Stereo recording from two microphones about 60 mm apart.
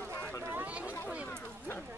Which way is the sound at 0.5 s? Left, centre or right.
Right.